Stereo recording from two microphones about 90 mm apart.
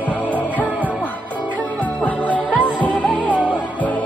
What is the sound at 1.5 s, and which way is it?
Music, 15° left (ahead or behind).